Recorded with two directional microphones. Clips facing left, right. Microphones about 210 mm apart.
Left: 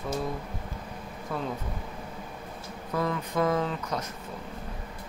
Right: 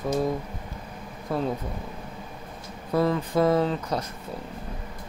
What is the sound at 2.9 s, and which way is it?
Speech, 35° right (ahead or behind).